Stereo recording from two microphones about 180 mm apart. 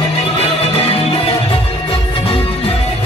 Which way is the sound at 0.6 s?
35° left (ahead or behind).